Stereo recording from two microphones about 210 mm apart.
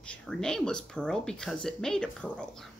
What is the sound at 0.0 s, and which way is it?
Speech, 5° left (ahead or behind).